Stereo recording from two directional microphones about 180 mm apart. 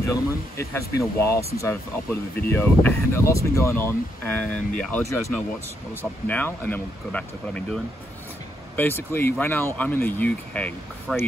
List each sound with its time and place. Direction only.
0.0 s speech: 15° left (ahead or behind)
6.2 s speech: 10° left (ahead or behind)